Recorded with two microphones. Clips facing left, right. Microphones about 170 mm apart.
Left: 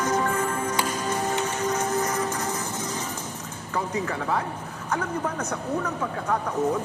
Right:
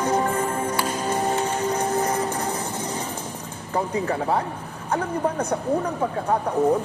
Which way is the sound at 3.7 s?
30° right (ahead or behind).